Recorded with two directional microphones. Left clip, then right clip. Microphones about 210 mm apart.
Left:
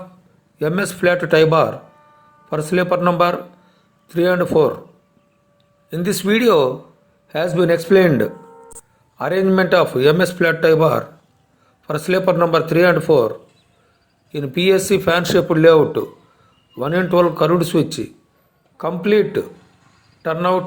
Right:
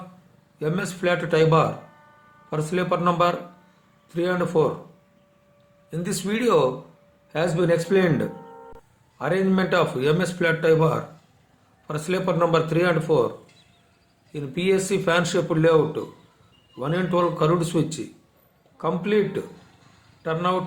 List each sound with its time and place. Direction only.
0.6 s speech: 30° left (ahead or behind)
5.9 s a man's voice: 30° left (ahead or behind)
14.3 s a man's voice: 35° left (ahead or behind)